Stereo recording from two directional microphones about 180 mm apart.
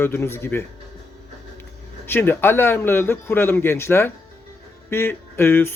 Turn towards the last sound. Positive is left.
turn(degrees=15)  # may be behind; listen again after turning